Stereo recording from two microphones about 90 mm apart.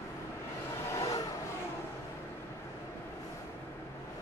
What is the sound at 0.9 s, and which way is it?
Vehicle, 45° left (ahead or behind).